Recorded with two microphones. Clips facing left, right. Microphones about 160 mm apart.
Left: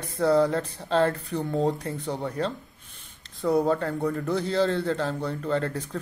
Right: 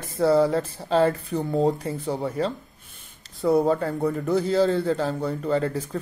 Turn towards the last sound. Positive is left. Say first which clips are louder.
# right 3 dB
turn(degrees=-5)  # may be behind; listen again after turning